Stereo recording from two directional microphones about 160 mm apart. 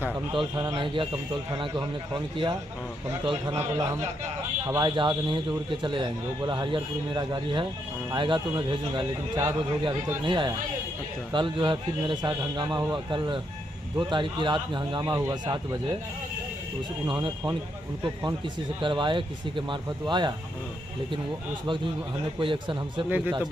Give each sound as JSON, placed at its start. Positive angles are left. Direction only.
{"t": 0.3, "sound": "a man's voice", "side_deg": -20}
{"t": 4.9, "sound": "a man's voice", "side_deg": -30}
{"t": 17.1, "sound": "a man's voice", "side_deg": -25}
{"t": 18.8, "sound": "speech", "side_deg": -30}
{"t": 22.4, "sound": "speech", "side_deg": -30}
{"t": 23.0, "sound": "speech", "side_deg": -10}